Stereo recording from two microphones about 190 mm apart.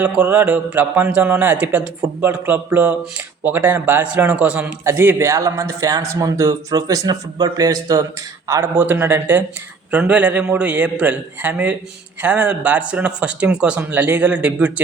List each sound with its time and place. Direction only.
0.0 s a man's voice: 10° right (ahead or behind)